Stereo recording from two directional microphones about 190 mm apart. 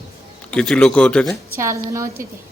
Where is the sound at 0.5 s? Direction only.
5° left (ahead or behind).